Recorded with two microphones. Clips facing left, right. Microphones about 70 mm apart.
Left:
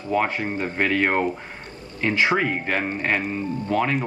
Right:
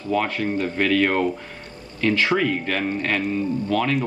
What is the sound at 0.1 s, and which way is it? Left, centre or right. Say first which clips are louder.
Speech: right 1 dB; left.